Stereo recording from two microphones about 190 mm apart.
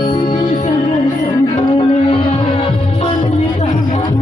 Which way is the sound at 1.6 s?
35° left (ahead or behind).